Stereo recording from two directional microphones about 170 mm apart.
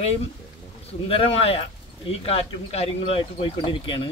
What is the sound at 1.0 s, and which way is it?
Speech, 35° left (ahead or behind).